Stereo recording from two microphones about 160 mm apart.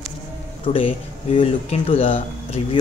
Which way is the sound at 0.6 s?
35° left (ahead or behind).